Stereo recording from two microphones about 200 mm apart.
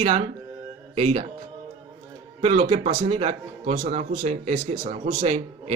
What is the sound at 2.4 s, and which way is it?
Speech, 35° right (ahead or behind).